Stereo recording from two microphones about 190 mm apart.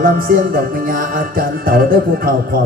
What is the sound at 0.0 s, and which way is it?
Music, 50° right (ahead or behind).